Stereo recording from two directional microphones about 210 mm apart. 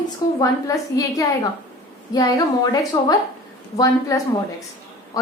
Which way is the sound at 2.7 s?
15° left (ahead or behind).